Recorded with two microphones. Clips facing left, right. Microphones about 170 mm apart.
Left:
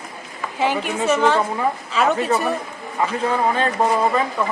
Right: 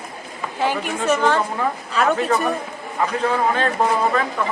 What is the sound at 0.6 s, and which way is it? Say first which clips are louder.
A woman's voice: left 1 dB; 10° left (ahead or behind).